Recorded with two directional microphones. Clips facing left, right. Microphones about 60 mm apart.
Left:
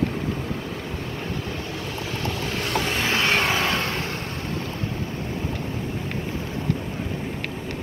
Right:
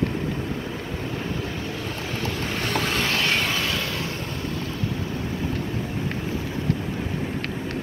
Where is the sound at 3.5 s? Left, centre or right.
Left.